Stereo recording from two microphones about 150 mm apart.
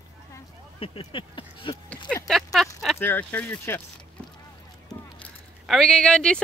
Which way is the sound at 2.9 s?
15° left (ahead or behind).